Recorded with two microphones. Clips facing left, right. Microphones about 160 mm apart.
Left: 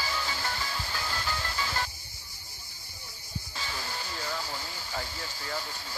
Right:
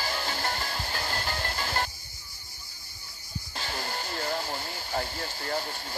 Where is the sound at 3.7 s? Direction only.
55° right (ahead or behind).